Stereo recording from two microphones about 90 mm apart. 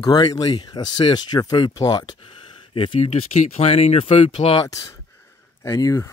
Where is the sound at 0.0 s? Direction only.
45° left (ahead or behind).